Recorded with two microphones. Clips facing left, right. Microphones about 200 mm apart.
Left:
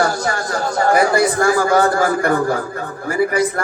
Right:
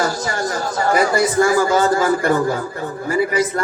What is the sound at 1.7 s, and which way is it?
Speech, 60° left (ahead or behind).